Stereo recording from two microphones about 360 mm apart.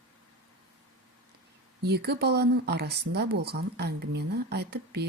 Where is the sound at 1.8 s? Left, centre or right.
Right.